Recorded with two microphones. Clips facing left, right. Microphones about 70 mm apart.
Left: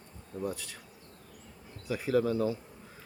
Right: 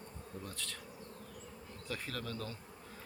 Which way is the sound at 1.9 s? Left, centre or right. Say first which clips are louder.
Left 14 dB; centre.